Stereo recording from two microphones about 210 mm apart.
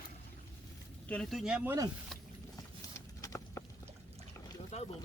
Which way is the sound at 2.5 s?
15° left (ahead or behind).